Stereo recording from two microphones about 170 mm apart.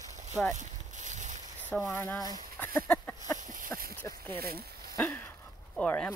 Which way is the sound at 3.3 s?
50° right (ahead or behind).